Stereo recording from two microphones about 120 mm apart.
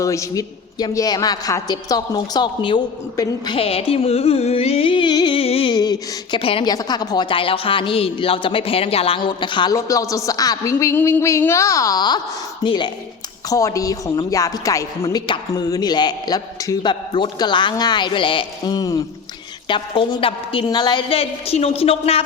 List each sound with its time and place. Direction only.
0.0 s a man's voice: 25° left (ahead or behind)
3.6 s a woman's voice: 55° left (ahead or behind)
5.4 s a sound: 50° left (ahead or behind)
5.7 s a sound: 35° left (ahead or behind)
6.4 s a woman's voice: 50° left (ahead or behind)
6.7 s a woman's voice: 35° left (ahead or behind)
9.7 s a sound: 30° left (ahead or behind)
12.6 s a woman's voice: 40° left (ahead or behind)
13.5 s a sound: 25° left (ahead or behind)
15.3 s a man's voice: 35° left (ahead or behind)
19.6 s a woman's voice: 45° left (ahead or behind)
20.7 s a man's voice: 35° left (ahead or behind)
21.1 s a woman's voice: 55° left (ahead or behind)